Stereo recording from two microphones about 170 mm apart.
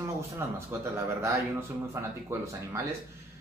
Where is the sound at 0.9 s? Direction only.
15° right (ahead or behind).